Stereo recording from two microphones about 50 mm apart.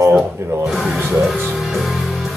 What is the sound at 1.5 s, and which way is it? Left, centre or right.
Music, centre.